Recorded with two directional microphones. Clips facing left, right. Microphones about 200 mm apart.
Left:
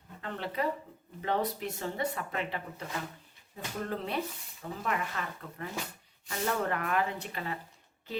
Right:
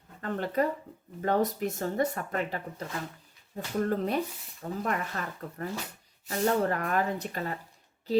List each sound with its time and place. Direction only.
0.2 s speech: 45° right (ahead or behind)